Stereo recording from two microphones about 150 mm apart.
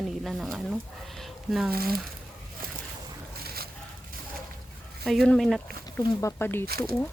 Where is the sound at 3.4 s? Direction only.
90° right.